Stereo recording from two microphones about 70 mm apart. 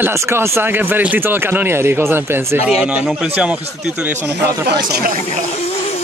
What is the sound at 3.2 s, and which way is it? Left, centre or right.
Speech, right.